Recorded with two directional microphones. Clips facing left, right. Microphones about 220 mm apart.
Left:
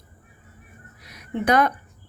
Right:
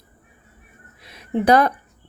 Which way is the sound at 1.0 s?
25° right (ahead or behind).